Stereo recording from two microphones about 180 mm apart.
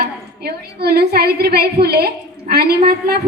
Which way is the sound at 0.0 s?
60° right (ahead or behind).